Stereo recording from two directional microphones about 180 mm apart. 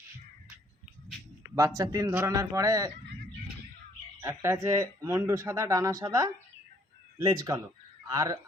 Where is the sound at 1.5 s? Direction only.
20° right (ahead or behind).